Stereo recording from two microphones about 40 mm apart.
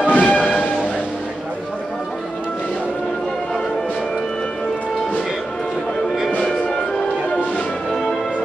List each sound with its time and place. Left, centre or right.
0.1 s bell: left
7.9 s music: centre